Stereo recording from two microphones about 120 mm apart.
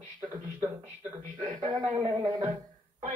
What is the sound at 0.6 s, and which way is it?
Speech, 25° right (ahead or behind).